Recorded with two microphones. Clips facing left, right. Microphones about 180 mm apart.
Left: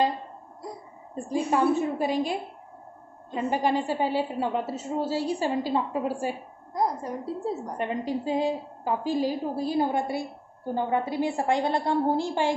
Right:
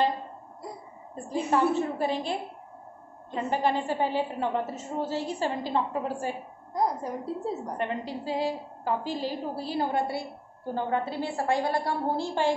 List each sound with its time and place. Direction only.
1.1 s a woman's voice: 15° left (ahead or behind)
3.3 s a woman's voice: 15° left (ahead or behind)
6.7 s a woman's voice: centre (ahead or behind)
7.7 s a woman's voice: 15° left (ahead or behind)